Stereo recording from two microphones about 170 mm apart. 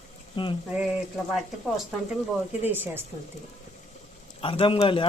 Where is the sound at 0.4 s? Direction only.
30° left (ahead or behind).